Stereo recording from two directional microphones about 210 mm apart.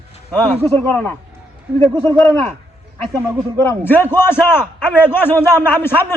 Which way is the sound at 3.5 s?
10° left (ahead or behind).